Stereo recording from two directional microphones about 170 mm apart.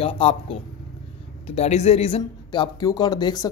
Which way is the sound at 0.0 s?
35° left (ahead or behind).